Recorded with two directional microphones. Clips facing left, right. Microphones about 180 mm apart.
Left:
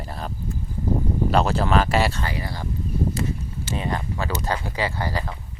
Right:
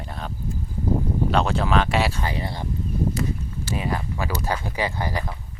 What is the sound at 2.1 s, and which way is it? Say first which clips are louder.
Speech: right 1 dB; 20° right (ahead or behind).